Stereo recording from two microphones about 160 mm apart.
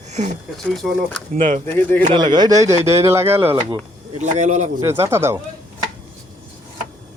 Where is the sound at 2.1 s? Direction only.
25° right (ahead or behind).